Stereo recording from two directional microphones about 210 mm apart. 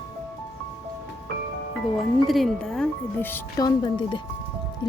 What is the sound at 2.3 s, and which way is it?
Speech, centre (ahead or behind).